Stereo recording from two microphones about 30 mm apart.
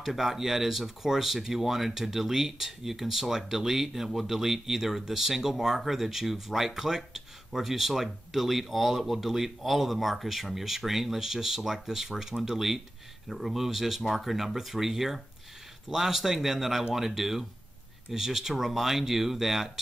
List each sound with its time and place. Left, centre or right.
0.0 s speech: centre